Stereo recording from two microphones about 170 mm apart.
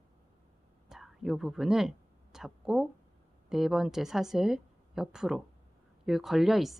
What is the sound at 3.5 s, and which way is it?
Speech, centre (ahead or behind).